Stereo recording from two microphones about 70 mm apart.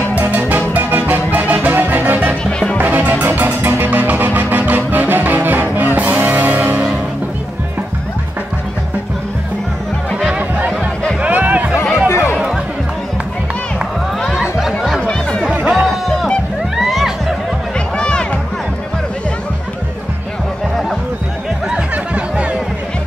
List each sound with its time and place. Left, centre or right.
0.3 s music: right
2.4 s music: centre
2.8 s music: right
11.1 s music: right
12.1 s music: left
15.0 s chatter: centre
15.4 s music: centre
15.7 s music: centre
17.7 s music: centre
21.6 s music: centre